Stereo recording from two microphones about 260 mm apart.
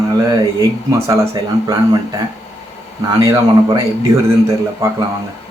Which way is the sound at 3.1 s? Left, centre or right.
Centre.